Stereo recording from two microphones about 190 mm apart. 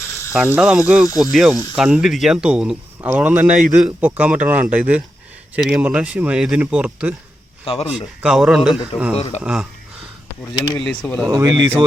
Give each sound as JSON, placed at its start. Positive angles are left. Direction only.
{"t": 0.0, "sound": "ratchet", "side_deg": 15}
{"t": 0.4, "sound": "speech", "side_deg": -5}
{"t": 7.6, "sound": "speech", "side_deg": 30}
{"t": 8.2, "sound": "speech", "side_deg": -5}
{"t": 10.8, "sound": "speech", "side_deg": 5}
{"t": 11.3, "sound": "speech", "side_deg": -20}